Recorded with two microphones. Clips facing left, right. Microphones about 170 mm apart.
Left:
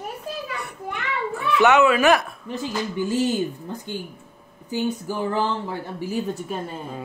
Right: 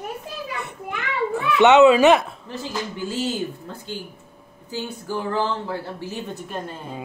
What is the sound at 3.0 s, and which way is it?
Speech, 15° left (ahead or behind).